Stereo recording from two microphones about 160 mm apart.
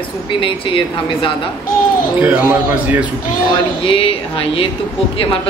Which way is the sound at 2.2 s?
10° right (ahead or behind).